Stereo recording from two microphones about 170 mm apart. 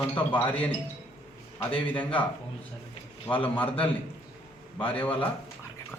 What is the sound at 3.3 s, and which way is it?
Speech, 10° left (ahead or behind).